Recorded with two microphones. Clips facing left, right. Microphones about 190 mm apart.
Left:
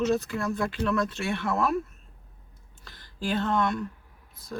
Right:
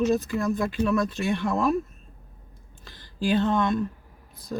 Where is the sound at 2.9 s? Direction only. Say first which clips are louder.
Right 5 dB; 15° right (ahead or behind).